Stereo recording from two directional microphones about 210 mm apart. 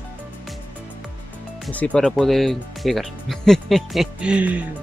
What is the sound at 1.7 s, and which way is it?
Speech, 5° left (ahead or behind).